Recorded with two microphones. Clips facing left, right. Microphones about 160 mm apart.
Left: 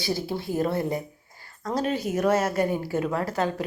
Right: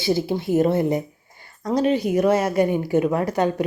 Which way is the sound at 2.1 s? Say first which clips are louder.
Right 2 dB; 10° right (ahead or behind).